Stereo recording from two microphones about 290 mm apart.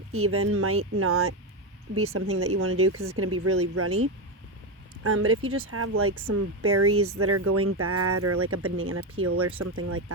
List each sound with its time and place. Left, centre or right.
0.1 s speech: right
5.0 s speech: right